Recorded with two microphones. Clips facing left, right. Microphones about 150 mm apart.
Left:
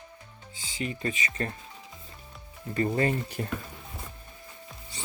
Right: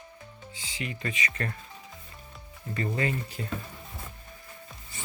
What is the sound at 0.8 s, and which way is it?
Speech, 35° left (ahead or behind).